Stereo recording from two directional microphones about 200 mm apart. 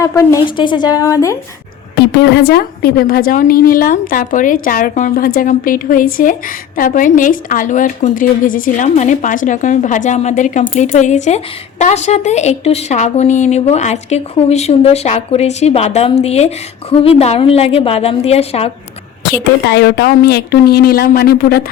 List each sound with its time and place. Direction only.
0.0 s a woman's voice: 15° left (ahead or behind)
2.0 s a woman's voice: 55° left (ahead or behind); by 18.7 s 30° left (ahead or behind)
19.2 s a woman's voice: 60° left (ahead or behind)